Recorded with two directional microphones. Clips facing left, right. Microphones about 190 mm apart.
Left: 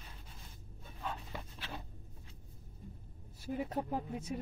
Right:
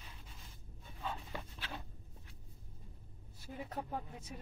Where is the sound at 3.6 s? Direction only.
20° left (ahead or behind).